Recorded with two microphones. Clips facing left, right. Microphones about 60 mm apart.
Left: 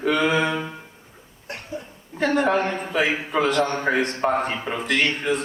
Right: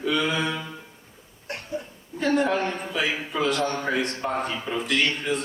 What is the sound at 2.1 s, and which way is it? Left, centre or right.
A man's voice, left.